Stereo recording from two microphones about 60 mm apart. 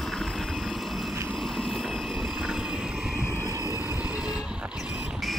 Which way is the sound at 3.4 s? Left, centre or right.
Right.